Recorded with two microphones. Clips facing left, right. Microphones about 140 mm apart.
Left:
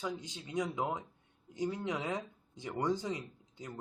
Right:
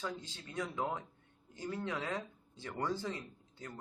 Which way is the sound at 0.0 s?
15° left (ahead or behind).